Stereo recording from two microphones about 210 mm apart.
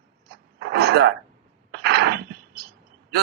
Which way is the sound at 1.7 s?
50° right (ahead or behind).